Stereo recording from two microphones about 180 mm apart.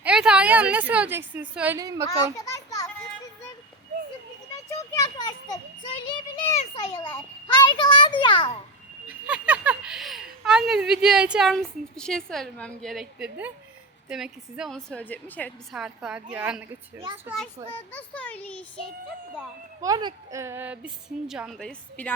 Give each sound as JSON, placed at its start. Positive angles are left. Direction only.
{"t": 0.0, "sound": "a woman's voice", "side_deg": -5}
{"t": 1.8, "sound": "a child's voice", "side_deg": -20}
{"t": 2.0, "sound": "a child's voice", "side_deg": 20}
{"t": 4.9, "sound": "children playing", "side_deg": 20}
{"t": 6.6, "sound": "a sound", "side_deg": 30}
{"t": 7.4, "sound": "a child's voice", "side_deg": 25}
{"t": 9.0, "sound": "a sound", "side_deg": -5}
{"t": 10.4, "sound": "a woman's voice", "side_deg": -5}
{"t": 15.7, "sound": "a woman's voice", "side_deg": -5}
{"t": 17.9, "sound": "a child's voice", "side_deg": 10}
{"t": 19.8, "sound": "a woman's voice", "side_deg": -20}